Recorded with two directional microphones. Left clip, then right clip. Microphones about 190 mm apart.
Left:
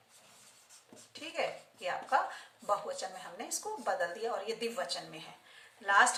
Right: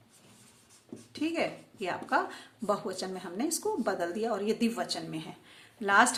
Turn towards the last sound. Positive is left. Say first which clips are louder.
# right 2 dB
turn(degrees=-50)  # may be behind; listen again after turning